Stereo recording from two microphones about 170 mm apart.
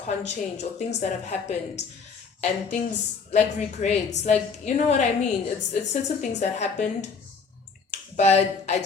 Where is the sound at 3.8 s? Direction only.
45° left (ahead or behind).